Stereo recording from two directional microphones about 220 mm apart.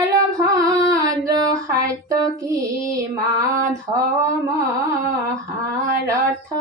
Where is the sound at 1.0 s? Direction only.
15° right (ahead or behind).